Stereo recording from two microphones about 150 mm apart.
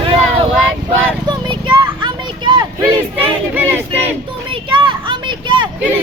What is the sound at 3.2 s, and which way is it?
Speech, 15° right (ahead or behind).